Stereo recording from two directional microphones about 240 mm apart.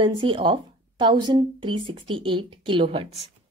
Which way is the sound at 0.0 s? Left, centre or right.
Right.